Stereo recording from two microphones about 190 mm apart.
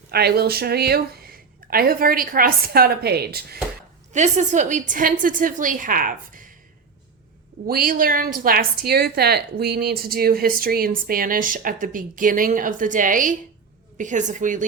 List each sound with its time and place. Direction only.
0.1 s a woman's voice: 55° right (ahead or behind)
4.1 s a woman's voice: 40° right (ahead or behind)
7.7 s a woman's voice: 50° right (ahead or behind)